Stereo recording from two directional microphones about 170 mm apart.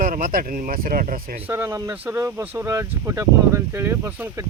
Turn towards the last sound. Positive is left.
turn(degrees=-15)  # may be behind; listen again after turning